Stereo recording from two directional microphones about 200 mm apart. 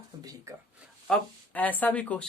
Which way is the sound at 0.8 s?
Centre (ahead or behind).